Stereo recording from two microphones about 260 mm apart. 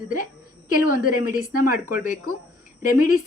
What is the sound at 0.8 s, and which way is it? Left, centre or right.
Speech, left.